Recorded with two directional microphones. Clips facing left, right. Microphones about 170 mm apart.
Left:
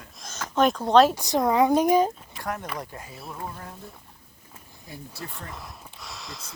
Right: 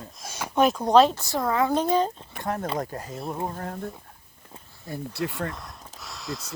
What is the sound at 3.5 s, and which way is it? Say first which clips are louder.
Speech: right 8 dB; 55° right (ahead or behind).